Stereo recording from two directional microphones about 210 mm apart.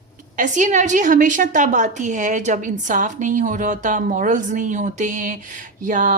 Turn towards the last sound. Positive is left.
turn(degrees=-40)  # may be behind; listen again after turning